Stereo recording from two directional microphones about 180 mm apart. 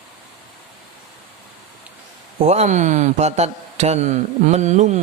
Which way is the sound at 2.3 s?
35° right (ahead or behind).